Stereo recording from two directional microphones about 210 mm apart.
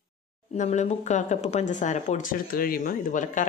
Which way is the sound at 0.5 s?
35° left (ahead or behind).